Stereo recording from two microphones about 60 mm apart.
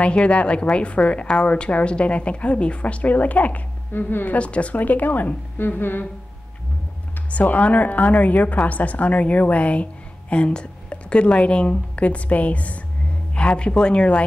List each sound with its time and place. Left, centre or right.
0.0 s a woman's voice: centre; by 4.4 s left
4.4 s a woman's voice: left
7.2 s a woman's voice: left